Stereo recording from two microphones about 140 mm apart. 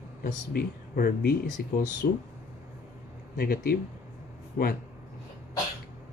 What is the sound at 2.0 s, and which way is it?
Speech, 80° left.